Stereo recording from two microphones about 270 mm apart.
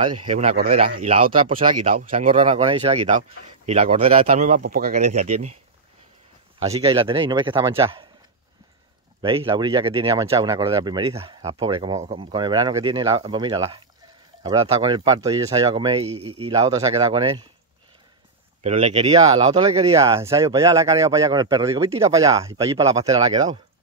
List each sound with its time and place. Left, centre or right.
0.2 s speech: right
6.6 s speech: right
9.2 s speech: centre
18.6 s speech: right